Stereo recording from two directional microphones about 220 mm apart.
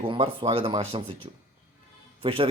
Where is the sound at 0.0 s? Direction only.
25° right (ahead or behind).